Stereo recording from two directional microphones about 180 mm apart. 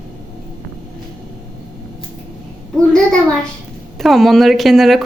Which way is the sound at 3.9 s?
Centre (ahead or behind).